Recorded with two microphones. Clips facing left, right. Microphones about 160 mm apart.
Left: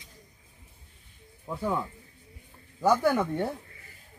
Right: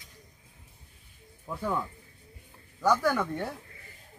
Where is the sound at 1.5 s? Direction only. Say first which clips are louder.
Left 2 dB; 10° left (ahead or behind).